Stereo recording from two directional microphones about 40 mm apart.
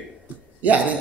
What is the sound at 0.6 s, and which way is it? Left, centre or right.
Speech, right.